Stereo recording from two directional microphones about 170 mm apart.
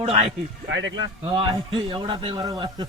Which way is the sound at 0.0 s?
35° right (ahead or behind).